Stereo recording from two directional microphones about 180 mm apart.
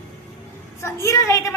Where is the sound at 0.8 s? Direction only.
15° left (ahead or behind).